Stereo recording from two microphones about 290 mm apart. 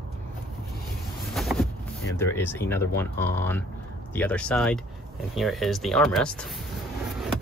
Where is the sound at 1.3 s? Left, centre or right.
Centre.